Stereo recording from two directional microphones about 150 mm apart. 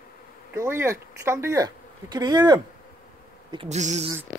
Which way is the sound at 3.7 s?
50° right (ahead or behind).